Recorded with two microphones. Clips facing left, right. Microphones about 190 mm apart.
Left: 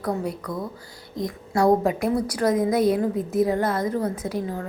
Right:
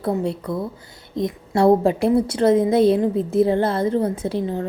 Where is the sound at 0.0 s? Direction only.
25° right (ahead or behind).